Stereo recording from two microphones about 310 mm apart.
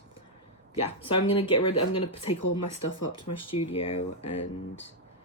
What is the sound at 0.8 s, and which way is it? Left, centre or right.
Speech, centre.